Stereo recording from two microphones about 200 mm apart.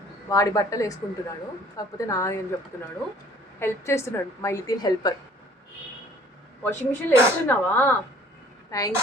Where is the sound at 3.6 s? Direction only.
15° left (ahead or behind).